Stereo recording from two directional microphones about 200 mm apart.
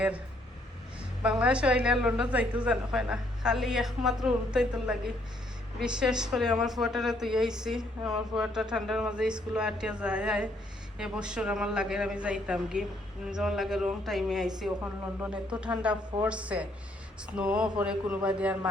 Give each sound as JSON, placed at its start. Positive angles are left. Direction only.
{"t": 1.4, "sound": "a woman's voice", "side_deg": -5}